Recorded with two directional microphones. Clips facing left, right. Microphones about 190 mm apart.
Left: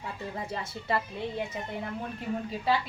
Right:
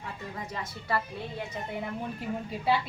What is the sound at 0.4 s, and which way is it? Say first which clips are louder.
Speech: left 2 dB; 30° left (ahead or behind).